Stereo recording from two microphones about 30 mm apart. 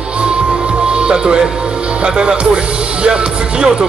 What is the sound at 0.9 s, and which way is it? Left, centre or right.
Speech, right.